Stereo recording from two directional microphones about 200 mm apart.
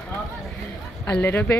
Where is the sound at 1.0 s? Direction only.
10° left (ahead or behind).